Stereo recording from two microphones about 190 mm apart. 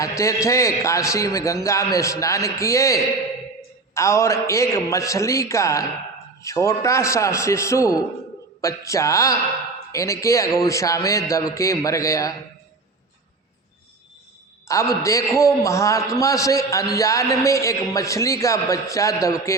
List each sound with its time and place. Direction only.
0.2 s a man's voice: 15° left (ahead or behind)
14.7 s a man's voice: 15° left (ahead or behind)